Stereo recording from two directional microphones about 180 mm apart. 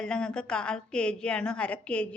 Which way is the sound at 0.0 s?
5° left (ahead or behind).